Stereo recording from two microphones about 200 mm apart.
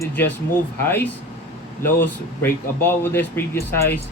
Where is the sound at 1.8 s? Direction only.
10° left (ahead or behind).